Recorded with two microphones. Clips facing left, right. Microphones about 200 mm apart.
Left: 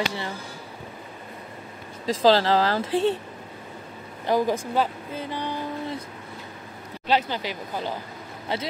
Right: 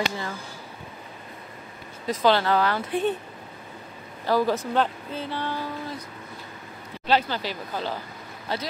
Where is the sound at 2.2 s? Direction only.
30° left (ahead or behind).